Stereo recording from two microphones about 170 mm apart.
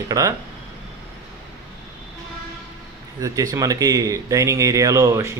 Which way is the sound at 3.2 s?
20° right (ahead or behind).